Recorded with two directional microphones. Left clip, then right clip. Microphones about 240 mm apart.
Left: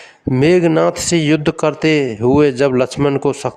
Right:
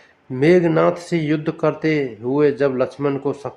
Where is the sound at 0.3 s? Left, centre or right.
Left.